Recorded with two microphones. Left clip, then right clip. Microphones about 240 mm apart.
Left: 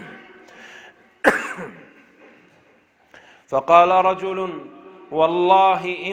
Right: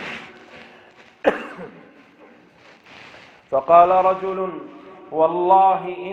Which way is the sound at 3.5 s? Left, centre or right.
Left.